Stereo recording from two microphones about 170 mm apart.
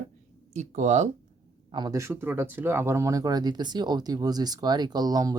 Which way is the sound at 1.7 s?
25° right (ahead or behind).